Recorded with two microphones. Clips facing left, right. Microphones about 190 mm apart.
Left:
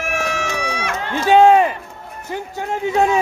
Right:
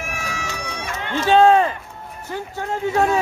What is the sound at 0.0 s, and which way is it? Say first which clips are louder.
Run: left 7 dB; 75° left (ahead or behind).